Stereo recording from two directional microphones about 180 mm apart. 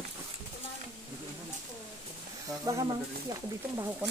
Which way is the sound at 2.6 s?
20° right (ahead or behind).